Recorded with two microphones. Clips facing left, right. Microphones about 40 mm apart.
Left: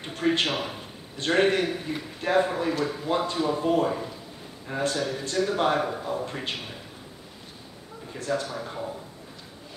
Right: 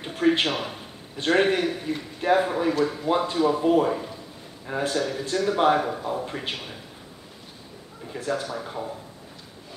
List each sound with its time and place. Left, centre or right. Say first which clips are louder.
0.0 s a man's voice: right 3 dB; centre
8.1 s speech: right 1 dB; centre